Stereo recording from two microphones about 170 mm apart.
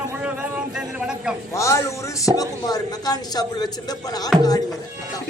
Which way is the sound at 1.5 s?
15° left (ahead or behind).